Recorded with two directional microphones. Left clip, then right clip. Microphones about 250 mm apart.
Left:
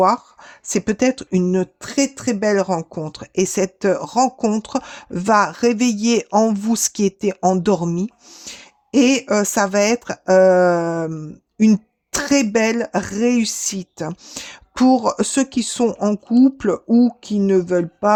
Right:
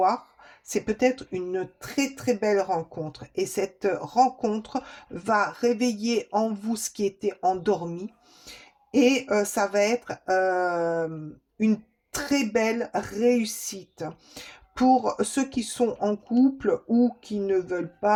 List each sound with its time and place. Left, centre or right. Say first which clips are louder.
0.6 s speech: left 5 dB; left